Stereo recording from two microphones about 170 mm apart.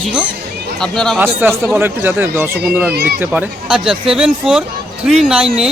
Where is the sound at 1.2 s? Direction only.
10° right (ahead or behind).